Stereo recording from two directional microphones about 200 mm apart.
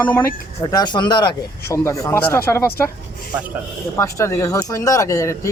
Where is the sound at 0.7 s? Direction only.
20° left (ahead or behind).